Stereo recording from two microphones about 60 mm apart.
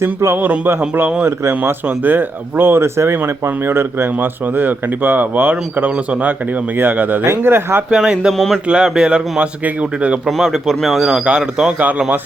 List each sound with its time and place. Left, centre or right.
0.3 s speech: right
7.9 s speech: centre
8.3 s a man's voice: centre
8.6 s speech: centre
10.2 s a man's voice: centre
11.3 s speech: centre
11.8 s speech: right